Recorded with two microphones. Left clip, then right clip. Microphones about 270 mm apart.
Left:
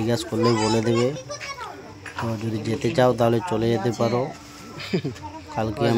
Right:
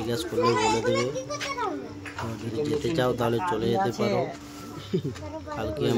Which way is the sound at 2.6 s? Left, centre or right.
Left.